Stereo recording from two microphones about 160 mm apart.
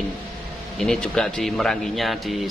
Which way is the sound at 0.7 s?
5° left (ahead or behind).